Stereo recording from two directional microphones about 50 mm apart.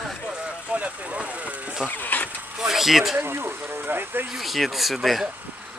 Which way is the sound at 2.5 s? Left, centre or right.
Centre.